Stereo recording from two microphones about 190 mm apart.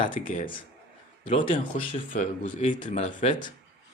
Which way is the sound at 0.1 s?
45° left (ahead or behind).